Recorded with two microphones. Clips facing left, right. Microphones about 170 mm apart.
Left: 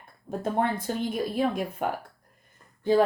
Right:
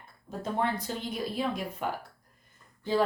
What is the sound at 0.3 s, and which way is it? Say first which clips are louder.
Speech: left 4 dB; 50° left (ahead or behind).